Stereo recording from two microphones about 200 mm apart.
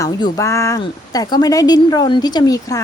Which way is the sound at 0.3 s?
15° left (ahead or behind).